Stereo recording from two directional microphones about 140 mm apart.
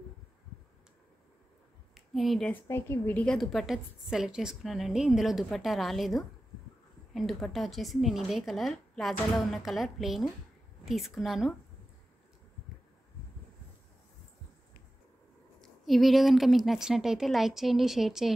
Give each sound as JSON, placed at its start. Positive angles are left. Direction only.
{"t": 2.0, "sound": "a woman's voice", "side_deg": 0}
{"t": 2.5, "sound": "a woman's voice", "side_deg": 15}
{"t": 15.6, "sound": "a woman's voice", "side_deg": 0}